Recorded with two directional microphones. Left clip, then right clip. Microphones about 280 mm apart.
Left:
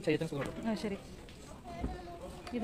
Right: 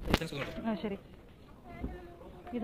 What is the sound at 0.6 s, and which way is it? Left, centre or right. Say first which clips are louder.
Speech: right 1 dB; centre.